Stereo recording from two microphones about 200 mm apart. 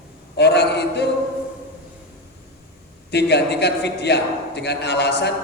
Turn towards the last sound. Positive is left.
turn(degrees=55)  # may be behind; listen again after turning